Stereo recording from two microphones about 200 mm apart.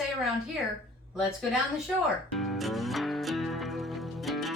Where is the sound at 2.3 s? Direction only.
Centre (ahead or behind).